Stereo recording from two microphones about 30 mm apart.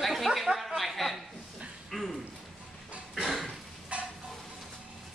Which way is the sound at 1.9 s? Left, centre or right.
Centre.